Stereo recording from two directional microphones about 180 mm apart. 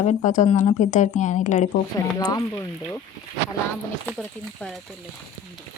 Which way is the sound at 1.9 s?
20° left (ahead or behind).